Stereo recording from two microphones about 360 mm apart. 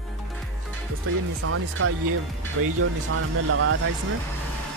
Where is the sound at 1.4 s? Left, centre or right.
Right.